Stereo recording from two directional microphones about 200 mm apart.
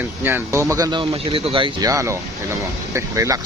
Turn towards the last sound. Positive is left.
turn(degrees=-15)  # may be behind; listen again after turning